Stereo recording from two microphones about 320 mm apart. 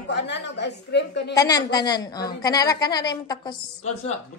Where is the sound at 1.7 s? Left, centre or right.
Centre.